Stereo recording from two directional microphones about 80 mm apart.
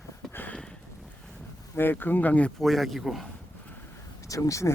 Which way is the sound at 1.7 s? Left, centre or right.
Left.